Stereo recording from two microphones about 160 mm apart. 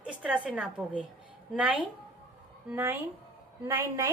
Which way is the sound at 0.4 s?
5° right (ahead or behind).